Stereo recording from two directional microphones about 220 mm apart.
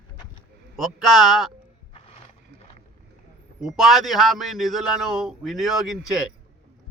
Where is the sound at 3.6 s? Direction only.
Centre (ahead or behind).